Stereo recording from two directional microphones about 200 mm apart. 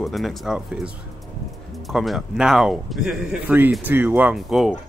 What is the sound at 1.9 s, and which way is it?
Speech, centre (ahead or behind).